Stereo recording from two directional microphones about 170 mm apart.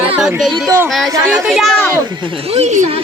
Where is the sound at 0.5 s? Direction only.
15° right (ahead or behind); by 1.9 s centre (ahead or behind).